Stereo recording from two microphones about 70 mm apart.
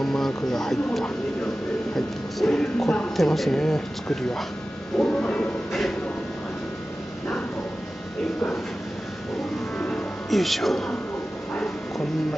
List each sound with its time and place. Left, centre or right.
0.0 s speech: centre
4.9 s music: centre
5.7 s a sound: centre
10.3 s speech: centre